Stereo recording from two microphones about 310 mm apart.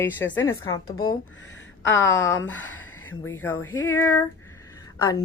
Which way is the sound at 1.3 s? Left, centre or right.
Left.